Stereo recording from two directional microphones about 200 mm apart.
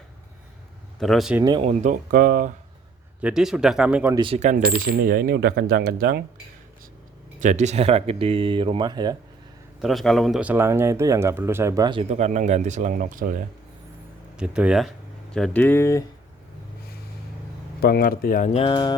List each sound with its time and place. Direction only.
0.9 s speech: centre (ahead or behind)
1.4 s speech: 20° right (ahead or behind)
1.8 s coin: 40° right (ahead or behind)
3.2 s speech: 5° right (ahead or behind)
4.1 s coin: 25° right (ahead or behind); by 6.2 s 50° right (ahead or behind)
7.3 s speech: 35° right (ahead or behind); by 9.1 s 20° right (ahead or behind)
9.8 s speech: centre (ahead or behind); by 13.4 s 45° right (ahead or behind)
14.3 s speech: 5° right (ahead or behind); by 16.0 s 15° left (ahead or behind)
17.7 s speech: 50° left (ahead or behind); by 18.9 s 25° left (ahead or behind)